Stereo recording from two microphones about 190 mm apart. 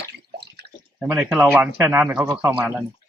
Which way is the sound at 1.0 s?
5° right (ahead or behind).